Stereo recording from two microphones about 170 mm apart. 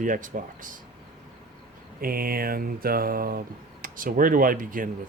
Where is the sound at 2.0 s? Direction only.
60° right (ahead or behind).